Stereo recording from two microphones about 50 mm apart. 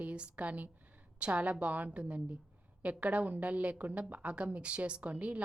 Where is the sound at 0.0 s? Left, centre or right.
Right.